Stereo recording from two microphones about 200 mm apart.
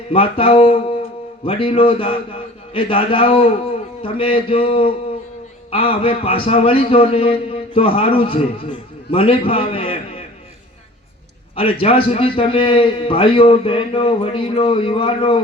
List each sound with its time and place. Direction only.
0.1 s a man's voice: 30° left (ahead or behind)
11.5 s a man's voice: 25° left (ahead or behind)